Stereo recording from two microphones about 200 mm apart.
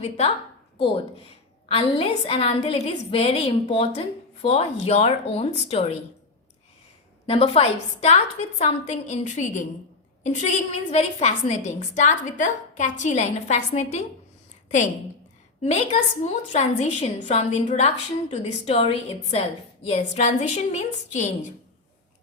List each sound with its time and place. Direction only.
1.6 s a woman's voice: 30° left (ahead or behind)
7.3 s a woman's voice: 30° left (ahead or behind)
15.6 s a woman's voice: 35° left (ahead or behind)